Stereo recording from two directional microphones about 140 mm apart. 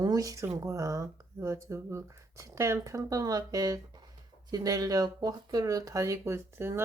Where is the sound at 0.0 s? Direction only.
25° right (ahead or behind).